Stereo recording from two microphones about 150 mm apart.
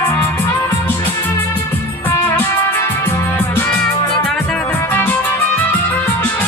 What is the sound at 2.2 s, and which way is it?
Music, 15° left (ahead or behind).